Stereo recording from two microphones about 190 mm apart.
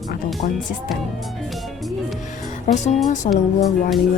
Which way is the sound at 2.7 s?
40° left (ahead or behind).